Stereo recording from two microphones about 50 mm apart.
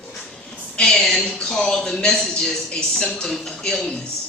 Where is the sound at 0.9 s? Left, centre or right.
Centre.